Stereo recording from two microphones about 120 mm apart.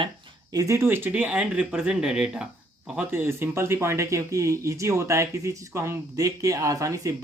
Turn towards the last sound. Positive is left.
turn(degrees=-30)  # may be behind; listen again after turning